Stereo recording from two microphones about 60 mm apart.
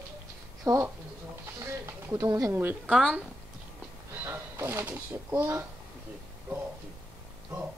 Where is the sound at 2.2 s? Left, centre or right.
Right.